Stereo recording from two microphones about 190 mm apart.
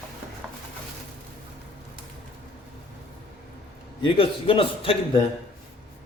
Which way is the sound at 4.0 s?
30° left (ahead or behind).